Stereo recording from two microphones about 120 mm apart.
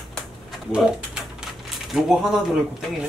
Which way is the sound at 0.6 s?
5° right (ahead or behind).